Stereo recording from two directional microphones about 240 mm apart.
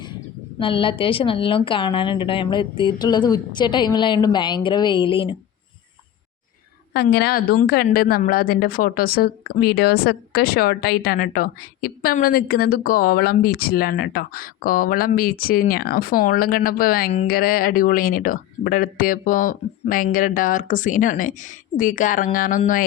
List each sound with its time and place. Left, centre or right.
0.6 s a woman's voice: left
6.9 s a woman's voice: left